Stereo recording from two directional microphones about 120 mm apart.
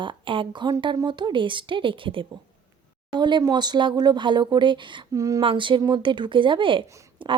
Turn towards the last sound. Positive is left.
turn(degrees=-45)  # may be behind; listen again after turning